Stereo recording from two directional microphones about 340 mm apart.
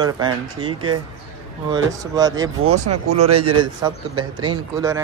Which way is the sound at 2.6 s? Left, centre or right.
Right.